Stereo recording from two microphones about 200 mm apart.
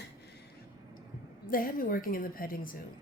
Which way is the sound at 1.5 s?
45° left (ahead or behind).